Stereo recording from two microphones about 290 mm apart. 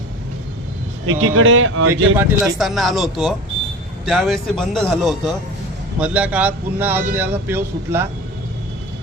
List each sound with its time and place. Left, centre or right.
1.0 s speech: right
2.1 s a man's voice: centre